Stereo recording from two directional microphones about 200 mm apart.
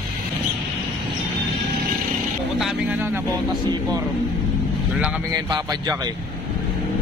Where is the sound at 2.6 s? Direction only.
5° right (ahead or behind).